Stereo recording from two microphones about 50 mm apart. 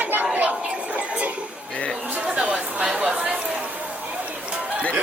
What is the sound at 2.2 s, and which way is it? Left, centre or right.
Chatter, right.